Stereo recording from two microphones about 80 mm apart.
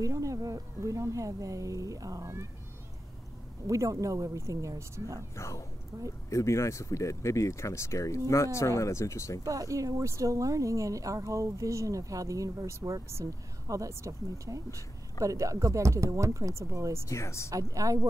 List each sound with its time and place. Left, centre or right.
0.0 s speech: right
3.6 s speech: right
5.3 s speech: left
9.4 s speech: right
17.1 s speech: left
17.5 s speech: right